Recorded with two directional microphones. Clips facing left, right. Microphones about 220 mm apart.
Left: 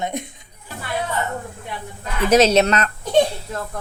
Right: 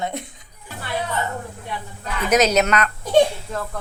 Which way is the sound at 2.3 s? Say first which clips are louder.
Left 3 dB; 30° left (ahead or behind).